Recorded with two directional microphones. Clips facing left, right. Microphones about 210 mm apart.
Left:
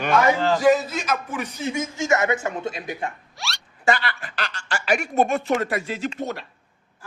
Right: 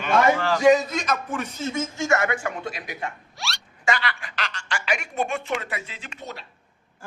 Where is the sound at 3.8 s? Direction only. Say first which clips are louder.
Left 3 dB; 40° left (ahead or behind).